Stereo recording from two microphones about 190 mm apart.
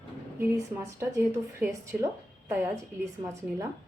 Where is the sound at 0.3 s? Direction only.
15° right (ahead or behind).